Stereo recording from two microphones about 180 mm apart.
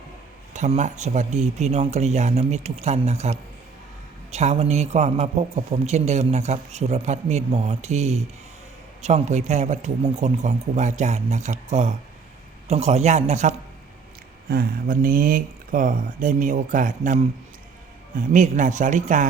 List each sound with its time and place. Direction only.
0.5 s a man's voice: 40° right (ahead or behind)
14.5 s speech: 50° right (ahead or behind)